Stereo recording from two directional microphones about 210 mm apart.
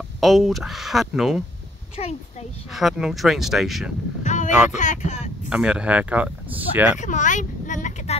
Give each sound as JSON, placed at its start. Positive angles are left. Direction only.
{"t": 0.2, "sound": "speech", "side_deg": 0}
{"t": 2.0, "sound": "speech", "side_deg": 30}
{"t": 2.7, "sound": "speech", "side_deg": 0}
{"t": 4.2, "sound": "a sound", "side_deg": 35}
{"t": 4.5, "sound": "speech", "side_deg": -5}
{"t": 4.7, "sound": "speech", "side_deg": 35}
{"t": 5.5, "sound": "speech", "side_deg": -5}
{"t": 7.0, "sound": "speech", "side_deg": 35}